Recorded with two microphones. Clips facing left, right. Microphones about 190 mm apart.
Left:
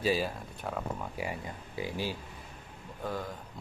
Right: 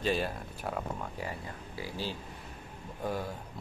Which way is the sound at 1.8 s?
15° left (ahead or behind).